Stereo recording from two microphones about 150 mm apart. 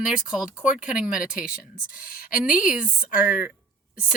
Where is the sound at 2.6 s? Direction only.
5° right (ahead or behind).